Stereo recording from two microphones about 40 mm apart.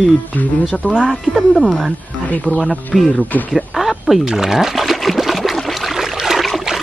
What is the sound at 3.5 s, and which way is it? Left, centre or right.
Speech, centre.